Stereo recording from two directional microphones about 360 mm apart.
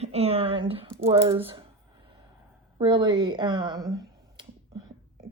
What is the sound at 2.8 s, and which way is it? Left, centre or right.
Finger snapping, centre.